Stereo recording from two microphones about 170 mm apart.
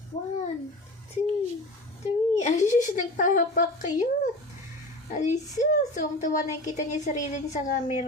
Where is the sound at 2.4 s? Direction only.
45° left (ahead or behind).